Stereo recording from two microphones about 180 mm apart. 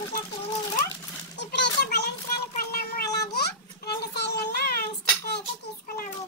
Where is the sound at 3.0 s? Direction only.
20° left (ahead or behind).